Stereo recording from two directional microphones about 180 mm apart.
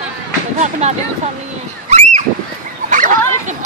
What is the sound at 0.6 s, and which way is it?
Speech, 40° right (ahead or behind).